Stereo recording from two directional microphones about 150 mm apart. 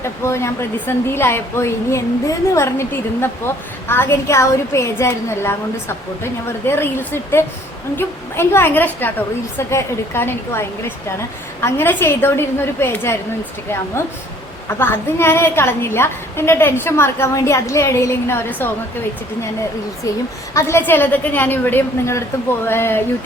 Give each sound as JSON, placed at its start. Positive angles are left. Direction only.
{"t": 0.0, "sound": "speech", "side_deg": 20}
{"t": 6.7, "sound": "speech", "side_deg": 15}
{"t": 14.7, "sound": "speech", "side_deg": 15}
{"t": 20.5, "sound": "speech", "side_deg": 20}